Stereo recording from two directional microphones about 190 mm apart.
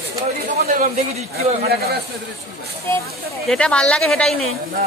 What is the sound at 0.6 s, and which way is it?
A man's voice, 50° right (ahead or behind).